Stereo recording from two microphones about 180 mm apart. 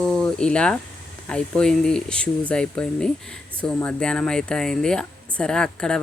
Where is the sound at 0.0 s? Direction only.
5° left (ahead or behind).